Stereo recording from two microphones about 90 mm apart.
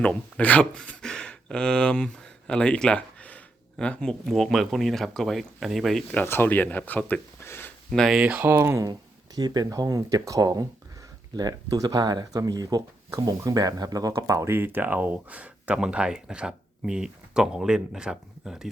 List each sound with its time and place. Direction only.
0.0 s speech: 15° left (ahead or behind)
4.3 s speech: centre (ahead or behind)
6.2 s speech: 25° left (ahead or behind)
7.9 s speech: 5° left (ahead or behind)
8.2 s speech: 15° right (ahead or behind)
8.9 s speech: 45° right (ahead or behind); by 18.7 s 5° right (ahead or behind)